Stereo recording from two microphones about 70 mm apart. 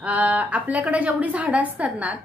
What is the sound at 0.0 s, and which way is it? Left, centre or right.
A woman's voice, centre.